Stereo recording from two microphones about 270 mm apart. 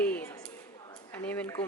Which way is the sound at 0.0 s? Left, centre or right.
Centre.